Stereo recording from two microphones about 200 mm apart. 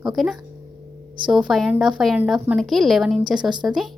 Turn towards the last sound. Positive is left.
turn(degrees=-5)  # may be behind; listen again after turning